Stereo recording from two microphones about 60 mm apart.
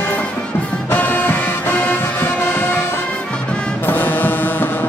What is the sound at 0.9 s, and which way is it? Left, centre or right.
Music, left.